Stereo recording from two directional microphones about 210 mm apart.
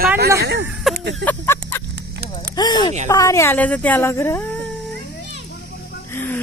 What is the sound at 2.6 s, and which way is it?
A child's voice, 20° left (ahead or behind).